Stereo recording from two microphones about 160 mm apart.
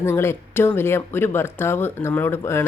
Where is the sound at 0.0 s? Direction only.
15° left (ahead or behind).